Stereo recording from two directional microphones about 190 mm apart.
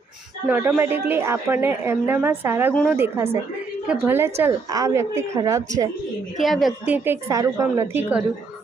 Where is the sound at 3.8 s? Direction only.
10° right (ahead or behind).